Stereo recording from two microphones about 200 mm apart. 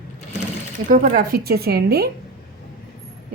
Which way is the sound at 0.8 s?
40° right (ahead or behind).